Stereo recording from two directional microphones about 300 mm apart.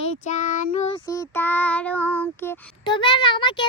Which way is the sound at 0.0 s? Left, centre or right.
Left.